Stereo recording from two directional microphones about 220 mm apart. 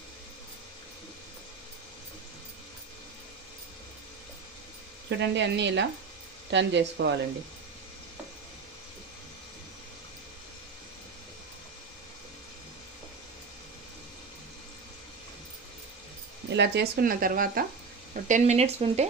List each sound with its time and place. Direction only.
5.1 s speech: 55° right (ahead or behind)
16.4 s speech: 50° right (ahead or behind); by 19.0 s 30° right (ahead or behind)